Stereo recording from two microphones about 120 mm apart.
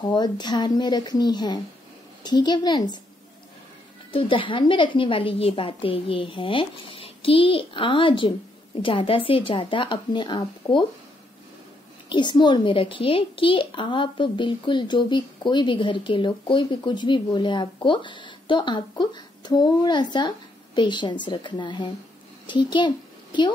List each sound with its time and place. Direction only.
0.0 s a woman's voice: 35° left (ahead or behind)
4.1 s a woman's voice: 45° left (ahead or behind)
12.1 s a woman's voice: 40° left (ahead or behind)